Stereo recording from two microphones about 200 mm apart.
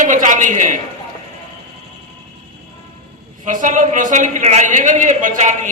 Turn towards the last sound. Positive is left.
turn(degrees=-35)  # may be behind; listen again after turning